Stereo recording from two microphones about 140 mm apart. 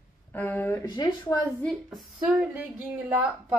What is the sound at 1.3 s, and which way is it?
Speech, 25° left (ahead or behind).